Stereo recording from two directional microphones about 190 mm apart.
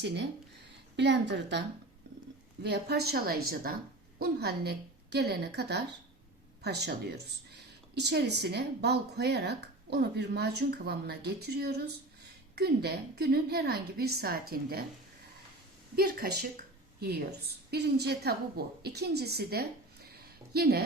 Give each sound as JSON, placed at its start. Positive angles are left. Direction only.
{"t": 0.9, "sound": "a woman's voice", "side_deg": -65}
{"t": 2.6, "sound": "speech", "side_deg": -60}
{"t": 16.0, "sound": "a woman's voice", "side_deg": -55}